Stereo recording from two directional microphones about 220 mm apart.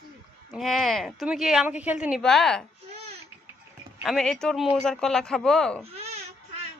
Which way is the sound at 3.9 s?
Centre (ahead or behind).